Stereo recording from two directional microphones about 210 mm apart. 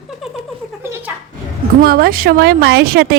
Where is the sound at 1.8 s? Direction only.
45° right (ahead or behind).